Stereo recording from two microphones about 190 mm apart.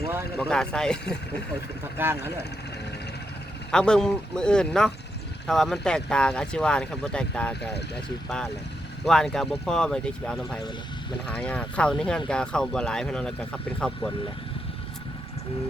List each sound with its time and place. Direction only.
0.3 s speech: 5° left (ahead or behind)
2.0 s speech: 10° right (ahead or behind)
3.7 s speech: 5° left (ahead or behind)
7.6 s speech: 60° left (ahead or behind)
9.0 s speech: 5° left (ahead or behind)